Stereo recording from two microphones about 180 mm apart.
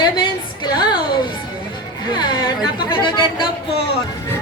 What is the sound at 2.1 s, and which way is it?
Speech, 25° left (ahead or behind).